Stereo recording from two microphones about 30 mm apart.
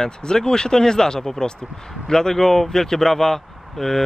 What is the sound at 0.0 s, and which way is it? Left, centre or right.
Speech, centre.